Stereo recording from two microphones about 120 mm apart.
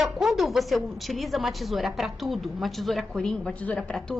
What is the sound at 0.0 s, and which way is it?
A woman's voice, centre (ahead or behind).